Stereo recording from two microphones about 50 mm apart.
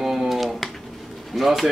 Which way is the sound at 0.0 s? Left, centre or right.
Centre.